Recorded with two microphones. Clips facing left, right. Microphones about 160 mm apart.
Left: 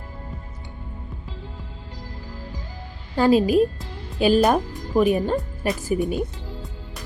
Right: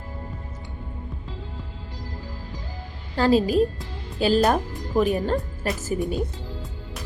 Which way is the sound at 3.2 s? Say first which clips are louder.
Left 2 dB; 15° left (ahead or behind).